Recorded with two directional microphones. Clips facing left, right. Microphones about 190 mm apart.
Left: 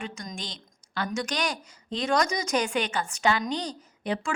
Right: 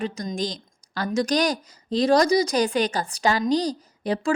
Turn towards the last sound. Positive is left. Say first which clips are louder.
# right 6 dB
turn(degrees=-35)  # may be behind; listen again after turning